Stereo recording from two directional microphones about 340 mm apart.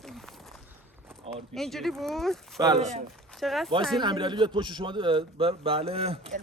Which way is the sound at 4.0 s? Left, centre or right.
Centre.